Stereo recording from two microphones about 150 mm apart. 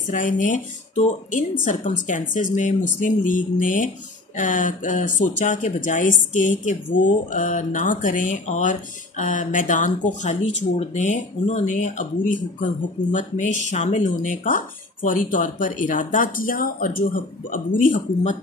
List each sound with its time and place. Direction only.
0.1 s speech: 60° left (ahead or behind)